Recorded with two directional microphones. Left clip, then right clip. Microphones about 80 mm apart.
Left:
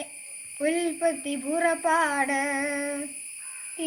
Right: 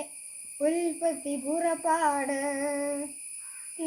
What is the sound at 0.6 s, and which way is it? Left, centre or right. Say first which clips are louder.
Speech: left 1 dB; right.